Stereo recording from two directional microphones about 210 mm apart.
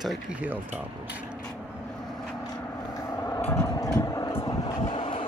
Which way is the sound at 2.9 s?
15° left (ahead or behind).